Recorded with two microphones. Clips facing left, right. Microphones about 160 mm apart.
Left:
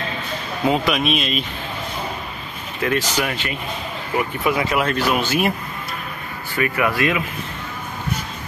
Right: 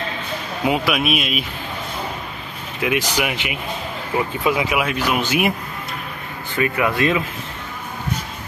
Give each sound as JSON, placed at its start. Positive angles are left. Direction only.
{"t": 0.7, "sound": "speech", "side_deg": -5}
{"t": 2.8, "sound": "speech", "side_deg": -15}
{"t": 6.6, "sound": "speech", "side_deg": -25}